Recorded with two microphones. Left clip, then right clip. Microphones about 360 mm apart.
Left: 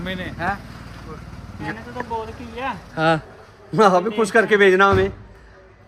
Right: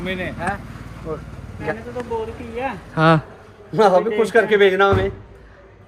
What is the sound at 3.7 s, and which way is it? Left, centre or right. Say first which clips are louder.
A man's voice: right 1 dB; left.